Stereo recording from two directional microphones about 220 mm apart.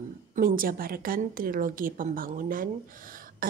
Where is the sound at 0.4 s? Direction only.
40° right (ahead or behind).